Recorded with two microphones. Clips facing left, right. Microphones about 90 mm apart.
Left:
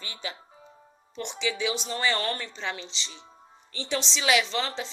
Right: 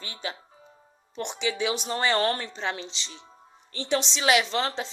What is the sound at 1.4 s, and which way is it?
Speech, 45° right (ahead or behind).